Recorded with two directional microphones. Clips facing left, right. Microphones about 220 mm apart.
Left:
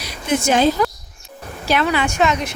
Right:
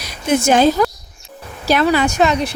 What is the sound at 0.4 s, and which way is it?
A woman's voice, 45° right (ahead or behind).